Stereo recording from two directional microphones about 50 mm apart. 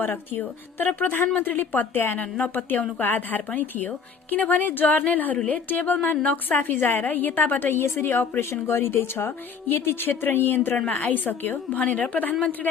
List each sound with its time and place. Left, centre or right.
0.0 s a woman's voice: left
11.8 s a woman's voice: left